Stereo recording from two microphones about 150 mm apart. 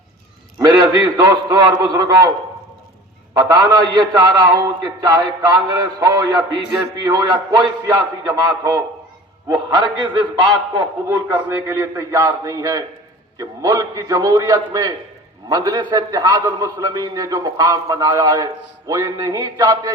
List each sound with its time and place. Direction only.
0.6 s a man's voice: 25° right (ahead or behind)
3.3 s a man's voice: 25° right (ahead or behind)
11.3 s a man's voice: 20° right (ahead or behind)